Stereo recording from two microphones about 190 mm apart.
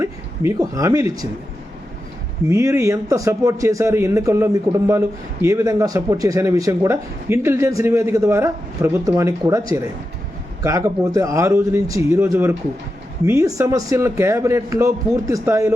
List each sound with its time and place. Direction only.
0.0 s speech: 15° right (ahead or behind)
2.5 s speech: 15° right (ahead or behind)